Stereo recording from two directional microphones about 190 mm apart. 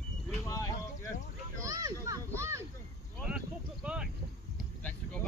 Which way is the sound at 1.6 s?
15° right (ahead or behind).